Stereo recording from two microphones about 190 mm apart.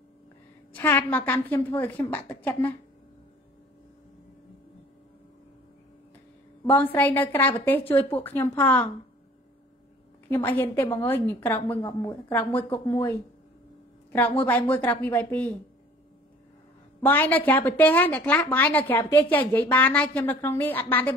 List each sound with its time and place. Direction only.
0.7 s a woman's voice: 10° left (ahead or behind)
6.7 s a woman's voice: 10° left (ahead or behind)
10.2 s a woman's voice: 10° left (ahead or behind)
14.4 s a woman's voice: 10° left (ahead or behind)
17.0 s a woman's voice: 10° left (ahead or behind)